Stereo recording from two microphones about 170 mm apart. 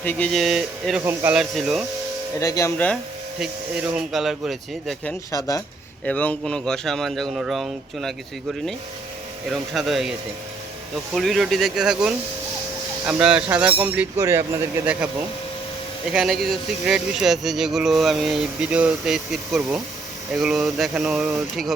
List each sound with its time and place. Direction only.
0.0 s speech: 10° left (ahead or behind)
1.0 s speech: 15° right (ahead or behind)
1.4 s speech: centre (ahead or behind)
2.4 s speech: 20° left (ahead or behind)
3.4 s speech: 5° right (ahead or behind)
5.3 s speech: 20° left (ahead or behind)
6.1 s speech: 10° left (ahead or behind)
9.5 s speech: centre (ahead or behind)
16.1 s speech: centre (ahead or behind)